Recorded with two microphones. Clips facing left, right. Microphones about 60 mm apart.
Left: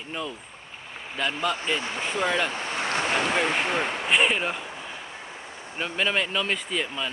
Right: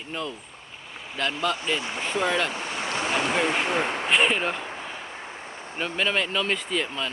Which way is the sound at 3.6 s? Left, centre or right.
Right.